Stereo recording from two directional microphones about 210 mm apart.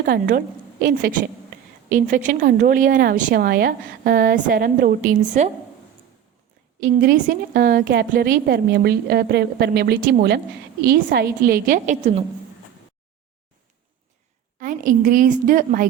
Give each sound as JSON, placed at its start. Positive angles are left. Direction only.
{"t": 0.0, "sound": "a woman's voice", "side_deg": -40}
{"t": 6.7, "sound": "a woman's voice", "side_deg": -40}
{"t": 14.6, "sound": "a woman's voice", "side_deg": -40}